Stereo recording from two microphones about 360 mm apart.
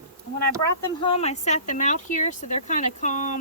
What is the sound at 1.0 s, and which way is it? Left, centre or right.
Speech, centre.